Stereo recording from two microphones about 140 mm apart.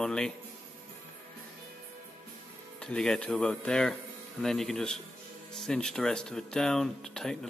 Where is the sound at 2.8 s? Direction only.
5° left (ahead or behind).